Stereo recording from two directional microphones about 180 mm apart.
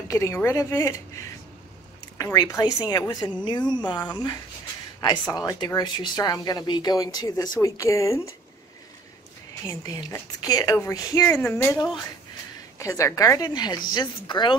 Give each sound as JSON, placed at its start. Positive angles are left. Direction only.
{"t": 0.1, "sound": "a woman's voice", "side_deg": 15}
{"t": 9.7, "sound": "a woman's voice", "side_deg": 20}